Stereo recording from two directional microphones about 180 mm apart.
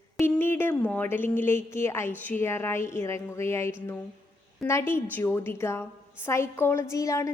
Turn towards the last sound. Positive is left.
turn(degrees=15)  # may be behind; listen again after turning